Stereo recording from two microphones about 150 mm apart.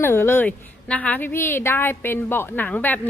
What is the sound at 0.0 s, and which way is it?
A woman's voice, 15° left (ahead or behind).